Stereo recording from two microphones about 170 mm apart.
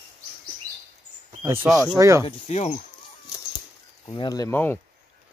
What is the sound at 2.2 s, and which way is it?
Speech, 40° left (ahead or behind).